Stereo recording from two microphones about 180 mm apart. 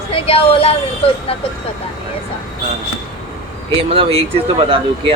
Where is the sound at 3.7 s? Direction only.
30° right (ahead or behind).